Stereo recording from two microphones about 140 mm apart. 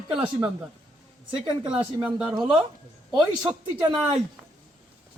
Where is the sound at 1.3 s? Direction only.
35° right (ahead or behind).